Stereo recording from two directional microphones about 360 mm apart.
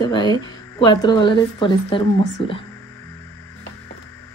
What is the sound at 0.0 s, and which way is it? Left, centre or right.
Speech, centre.